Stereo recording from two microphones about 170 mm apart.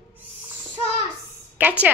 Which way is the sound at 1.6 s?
10° right (ahead or behind).